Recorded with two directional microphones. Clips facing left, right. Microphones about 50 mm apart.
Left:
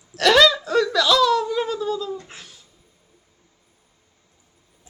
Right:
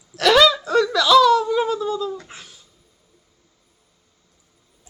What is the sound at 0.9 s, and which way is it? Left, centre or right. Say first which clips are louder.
Laughter: right 5 dB; centre.